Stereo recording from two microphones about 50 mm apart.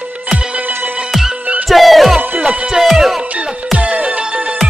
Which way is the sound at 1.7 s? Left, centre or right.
Centre.